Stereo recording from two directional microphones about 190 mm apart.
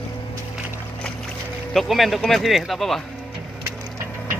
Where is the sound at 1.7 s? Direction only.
Centre (ahead or behind).